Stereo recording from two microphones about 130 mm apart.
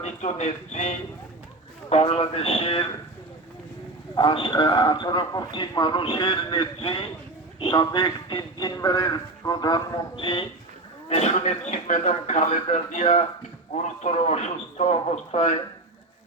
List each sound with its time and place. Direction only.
0.0 s speech: 60° left (ahead or behind)
1.9 s a man's voice: 50° left (ahead or behind)
4.1 s a man's voice: 40° left (ahead or behind)
11.1 s speech: 50° left (ahead or behind); by 13.2 s 70° left (ahead or behind)
13.8 s speech: 60° left (ahead or behind)